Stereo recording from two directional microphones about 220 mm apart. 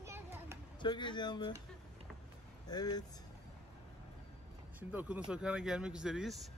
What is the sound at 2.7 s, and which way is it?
Speech, 20° left (ahead or behind).